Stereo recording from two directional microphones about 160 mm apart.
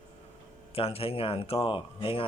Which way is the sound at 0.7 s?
35° left (ahead or behind).